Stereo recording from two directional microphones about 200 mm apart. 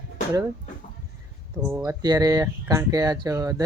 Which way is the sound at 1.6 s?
10° right (ahead or behind).